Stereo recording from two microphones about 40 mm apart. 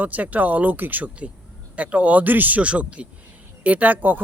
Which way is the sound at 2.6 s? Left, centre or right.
Right.